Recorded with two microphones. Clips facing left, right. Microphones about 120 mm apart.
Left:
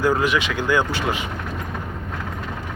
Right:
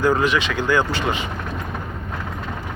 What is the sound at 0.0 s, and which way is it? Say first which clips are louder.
Speech: right 1 dB; 10° left (ahead or behind).